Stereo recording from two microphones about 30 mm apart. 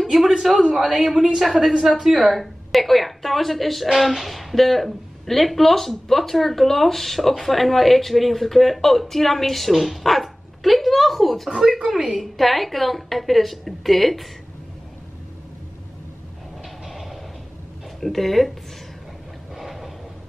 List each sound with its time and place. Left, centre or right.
0.6 s a man's voice: centre
16.8 s train: centre
18.0 s a woman's voice: centre
19.5 s a sound: centre